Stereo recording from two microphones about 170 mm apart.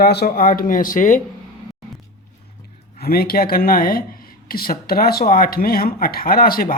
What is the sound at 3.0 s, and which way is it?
Speech, 65° left (ahead or behind).